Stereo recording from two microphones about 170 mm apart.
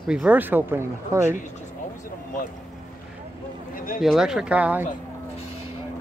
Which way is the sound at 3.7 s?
55° left (ahead or behind).